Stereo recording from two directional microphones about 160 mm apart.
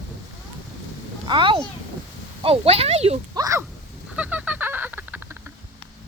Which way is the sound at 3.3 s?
20° right (ahead or behind).